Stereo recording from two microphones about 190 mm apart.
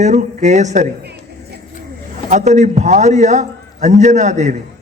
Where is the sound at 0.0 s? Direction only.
40° right (ahead or behind).